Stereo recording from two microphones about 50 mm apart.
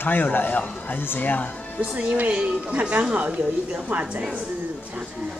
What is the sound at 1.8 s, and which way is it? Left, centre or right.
A woman's voice, right.